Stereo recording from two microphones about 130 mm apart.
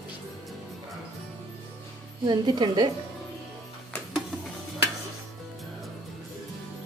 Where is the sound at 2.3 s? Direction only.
35° right (ahead or behind).